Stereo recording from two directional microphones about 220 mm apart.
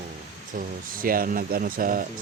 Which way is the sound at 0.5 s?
40° right (ahead or behind).